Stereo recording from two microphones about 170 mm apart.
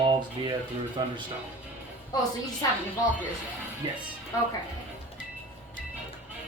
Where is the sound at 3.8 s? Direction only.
25° right (ahead or behind).